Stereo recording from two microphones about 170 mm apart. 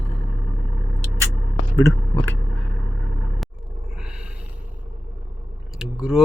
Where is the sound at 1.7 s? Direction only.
15° left (ahead or behind).